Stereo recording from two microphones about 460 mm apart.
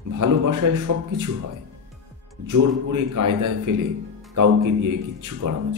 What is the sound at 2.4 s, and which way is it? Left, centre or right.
Speech, right.